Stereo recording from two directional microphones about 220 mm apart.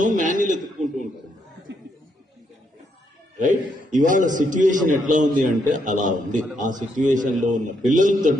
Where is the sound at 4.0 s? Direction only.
35° right (ahead or behind).